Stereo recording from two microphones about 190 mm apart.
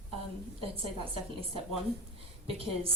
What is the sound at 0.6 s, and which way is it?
Speech, 30° right (ahead or behind).